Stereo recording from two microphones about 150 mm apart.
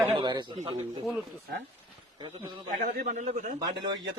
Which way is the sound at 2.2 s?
30° right (ahead or behind).